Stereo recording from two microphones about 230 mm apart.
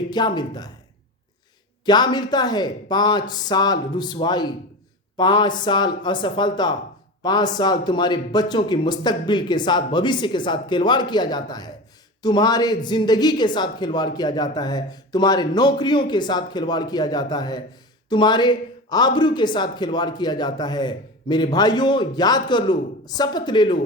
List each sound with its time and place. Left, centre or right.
0.1 s speech: centre
1.8 s a woman's voice: centre